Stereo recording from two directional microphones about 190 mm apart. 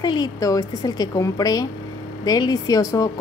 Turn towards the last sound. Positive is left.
turn(degrees=20)  # may be behind; listen again after turning